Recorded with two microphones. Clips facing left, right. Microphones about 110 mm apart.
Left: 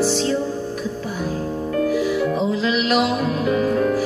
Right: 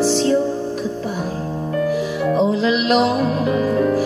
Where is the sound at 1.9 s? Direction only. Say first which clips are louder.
Right 1 dB; 30° right (ahead or behind).